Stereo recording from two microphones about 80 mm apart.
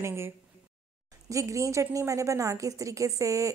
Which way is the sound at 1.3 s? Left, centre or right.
Right.